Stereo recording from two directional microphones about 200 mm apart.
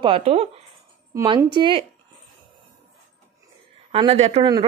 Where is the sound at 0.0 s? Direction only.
30° right (ahead or behind).